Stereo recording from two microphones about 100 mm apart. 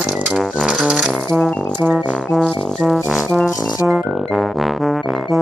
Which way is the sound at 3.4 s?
35° left (ahead or behind).